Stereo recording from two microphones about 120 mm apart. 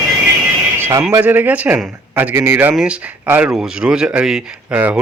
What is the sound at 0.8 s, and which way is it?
Speech, 25° right (ahead or behind).